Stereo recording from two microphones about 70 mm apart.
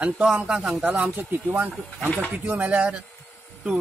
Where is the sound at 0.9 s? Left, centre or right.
Right.